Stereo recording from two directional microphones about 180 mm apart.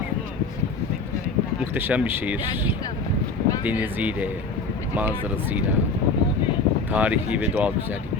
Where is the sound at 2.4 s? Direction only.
25° left (ahead or behind).